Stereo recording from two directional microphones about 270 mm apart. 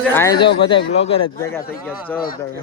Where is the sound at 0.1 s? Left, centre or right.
Centre.